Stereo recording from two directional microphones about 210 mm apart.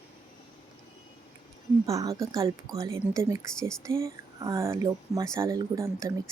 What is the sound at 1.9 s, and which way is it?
Speech, 15° right (ahead or behind).